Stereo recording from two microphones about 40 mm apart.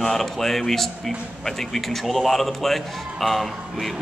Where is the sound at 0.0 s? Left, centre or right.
Centre.